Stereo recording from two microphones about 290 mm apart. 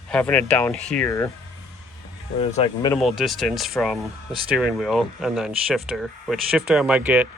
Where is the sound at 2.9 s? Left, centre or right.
Centre.